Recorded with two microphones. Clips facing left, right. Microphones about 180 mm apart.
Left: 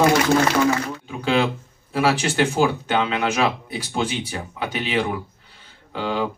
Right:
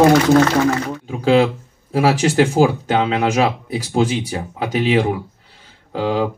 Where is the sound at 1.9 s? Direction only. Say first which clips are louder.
Right 5 dB; 40° right (ahead or behind).